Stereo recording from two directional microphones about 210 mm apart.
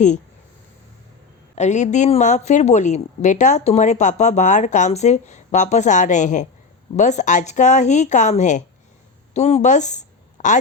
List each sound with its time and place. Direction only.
1.5 s a woman's voice: 35° left (ahead or behind)